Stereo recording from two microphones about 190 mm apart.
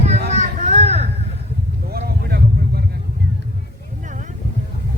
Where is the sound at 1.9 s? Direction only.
55° right (ahead or behind).